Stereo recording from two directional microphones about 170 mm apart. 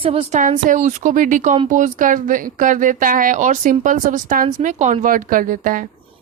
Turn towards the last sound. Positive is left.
turn(degrees=-55)  # may be behind; listen again after turning